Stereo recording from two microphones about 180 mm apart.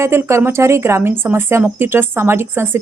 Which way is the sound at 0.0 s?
15° right (ahead or behind).